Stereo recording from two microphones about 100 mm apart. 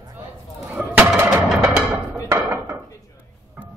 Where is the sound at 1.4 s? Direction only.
5° right (ahead or behind).